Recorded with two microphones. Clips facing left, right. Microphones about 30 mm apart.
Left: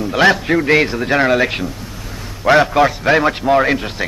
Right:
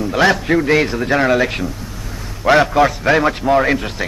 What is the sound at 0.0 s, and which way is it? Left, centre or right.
A man's voice, centre.